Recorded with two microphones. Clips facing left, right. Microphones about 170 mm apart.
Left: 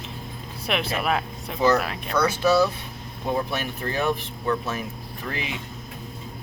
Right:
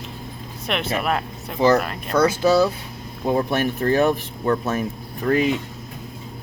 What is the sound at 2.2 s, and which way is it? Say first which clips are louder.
Speech: right 3 dB; 25° right (ahead or behind).